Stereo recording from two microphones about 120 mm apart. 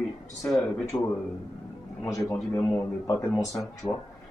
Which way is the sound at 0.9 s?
20° left (ahead or behind).